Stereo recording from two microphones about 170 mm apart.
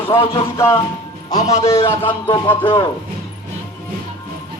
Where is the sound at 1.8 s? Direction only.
30° left (ahead or behind).